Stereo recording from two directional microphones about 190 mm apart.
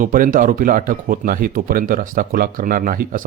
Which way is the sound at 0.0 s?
45° right (ahead or behind).